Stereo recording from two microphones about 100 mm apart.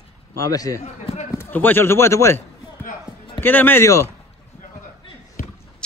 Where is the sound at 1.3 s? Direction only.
20° left (ahead or behind).